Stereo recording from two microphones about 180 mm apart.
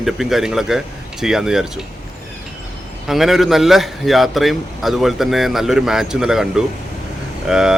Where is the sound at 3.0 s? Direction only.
Centre (ahead or behind).